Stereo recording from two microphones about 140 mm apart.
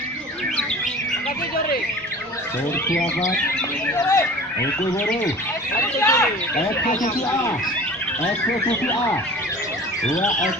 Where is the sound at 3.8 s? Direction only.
20° left (ahead or behind).